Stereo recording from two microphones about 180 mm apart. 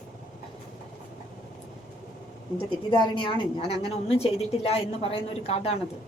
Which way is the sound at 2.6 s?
30° left (ahead or behind).